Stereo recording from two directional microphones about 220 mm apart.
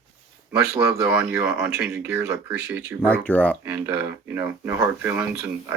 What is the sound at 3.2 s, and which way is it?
Speech, 5° left (ahead or behind).